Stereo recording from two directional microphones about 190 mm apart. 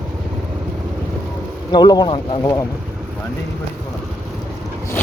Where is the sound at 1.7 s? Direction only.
20° left (ahead or behind).